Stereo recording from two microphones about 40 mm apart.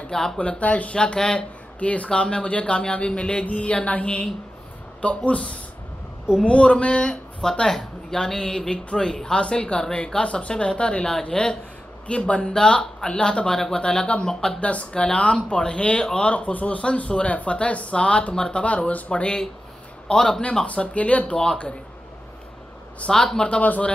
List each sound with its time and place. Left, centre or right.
0.1 s speech: centre
0.4 s speech: left
0.9 s speech: left
1.8 s speech: left
2.0 s speech: left
7.6 s speech: centre
14.6 s speech: left
15.5 s speech: left
20.1 s speech: centre
20.6 s speech: left
23.0 s speech: centre
23.5 s speech: left